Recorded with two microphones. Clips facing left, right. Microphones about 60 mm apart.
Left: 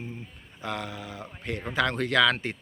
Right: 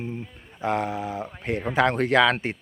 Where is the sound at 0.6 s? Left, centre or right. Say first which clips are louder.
Right 9 dB; right.